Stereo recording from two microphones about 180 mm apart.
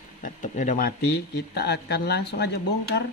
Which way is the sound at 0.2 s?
45° left (ahead or behind).